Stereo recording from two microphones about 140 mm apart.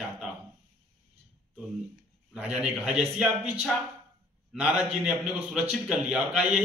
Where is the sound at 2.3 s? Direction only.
10° right (ahead or behind).